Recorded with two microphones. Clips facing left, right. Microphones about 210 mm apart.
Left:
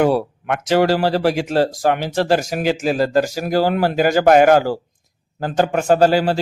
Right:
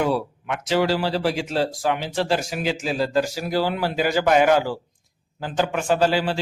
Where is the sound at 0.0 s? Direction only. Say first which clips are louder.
Left 6 dB; 55° left (ahead or behind).